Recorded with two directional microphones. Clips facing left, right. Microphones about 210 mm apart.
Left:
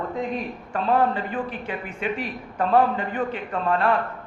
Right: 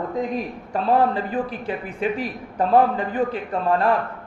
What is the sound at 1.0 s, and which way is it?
A man's voice, 35° right (ahead or behind).